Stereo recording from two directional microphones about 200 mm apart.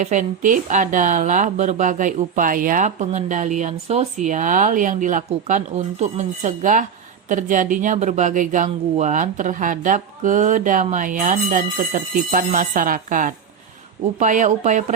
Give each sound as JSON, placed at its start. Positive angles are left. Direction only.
{"t": 0.0, "sound": "a woman's voice", "side_deg": -40}